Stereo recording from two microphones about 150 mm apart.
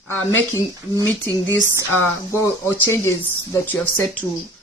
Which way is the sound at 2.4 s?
15° left (ahead or behind).